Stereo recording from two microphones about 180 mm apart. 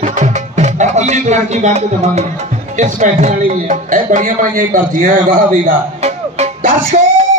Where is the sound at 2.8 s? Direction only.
40° right (ahead or behind).